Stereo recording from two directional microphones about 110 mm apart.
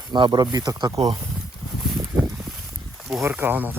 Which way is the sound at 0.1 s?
40° right (ahead or behind).